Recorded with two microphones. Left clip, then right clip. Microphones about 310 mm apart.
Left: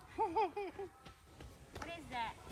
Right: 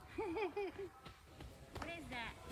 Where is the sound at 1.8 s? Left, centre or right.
Centre.